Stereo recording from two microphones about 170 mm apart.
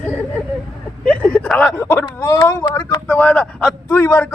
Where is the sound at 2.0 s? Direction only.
25° left (ahead or behind); by 3.7 s centre (ahead or behind).